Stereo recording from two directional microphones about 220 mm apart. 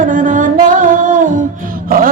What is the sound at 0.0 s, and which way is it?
Music, 35° right (ahead or behind).